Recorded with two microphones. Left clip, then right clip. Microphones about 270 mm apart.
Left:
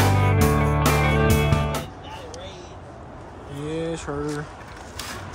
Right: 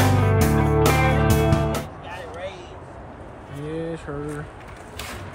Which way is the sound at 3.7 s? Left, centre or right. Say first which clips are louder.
Left 2 dB; centre.